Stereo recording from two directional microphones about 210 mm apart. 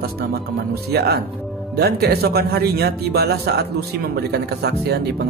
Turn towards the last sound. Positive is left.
turn(degrees=-50)  # may be behind; listen again after turning